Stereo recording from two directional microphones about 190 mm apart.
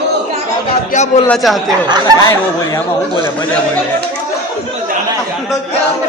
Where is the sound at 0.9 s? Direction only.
40° left (ahead or behind).